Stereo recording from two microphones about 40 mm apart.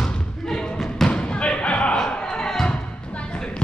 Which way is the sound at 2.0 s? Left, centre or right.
Centre.